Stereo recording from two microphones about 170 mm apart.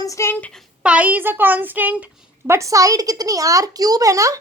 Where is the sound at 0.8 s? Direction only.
10° right (ahead or behind).